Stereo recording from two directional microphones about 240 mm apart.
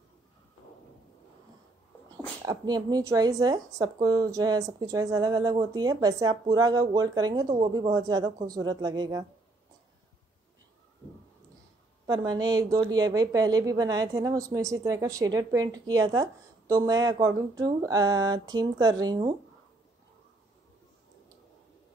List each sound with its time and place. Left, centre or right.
2.4 s a woman's voice: centre
12.1 s a woman's voice: centre